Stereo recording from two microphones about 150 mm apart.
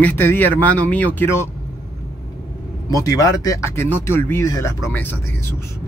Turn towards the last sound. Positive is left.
turn(degrees=15)  # may be behind; listen again after turning